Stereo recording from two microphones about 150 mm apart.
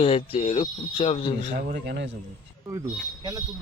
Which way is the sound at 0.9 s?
35° left (ahead or behind).